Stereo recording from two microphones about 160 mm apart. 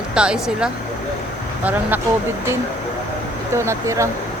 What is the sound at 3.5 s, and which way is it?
Speech, 15° right (ahead or behind).